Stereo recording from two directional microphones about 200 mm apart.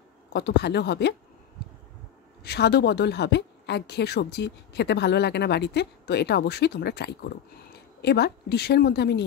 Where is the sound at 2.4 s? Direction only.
55° left (ahead or behind).